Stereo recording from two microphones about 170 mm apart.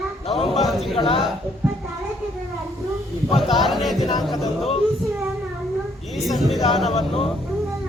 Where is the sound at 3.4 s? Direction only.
Centre (ahead or behind).